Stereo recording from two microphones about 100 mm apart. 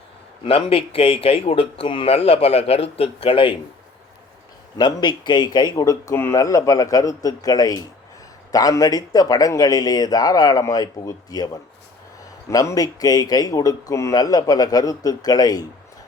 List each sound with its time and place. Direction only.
0.4 s speech: 65° left (ahead or behind)
4.8 s speech: 45° left (ahead or behind)
5.7 s speech: 35° left (ahead or behind)